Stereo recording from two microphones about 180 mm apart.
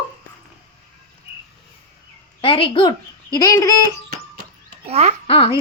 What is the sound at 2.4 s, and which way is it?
A woman's voice, 30° left (ahead or behind).